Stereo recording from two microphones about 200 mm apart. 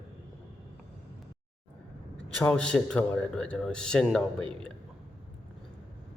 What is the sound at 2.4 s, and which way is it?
A man's voice, 5° left (ahead or behind).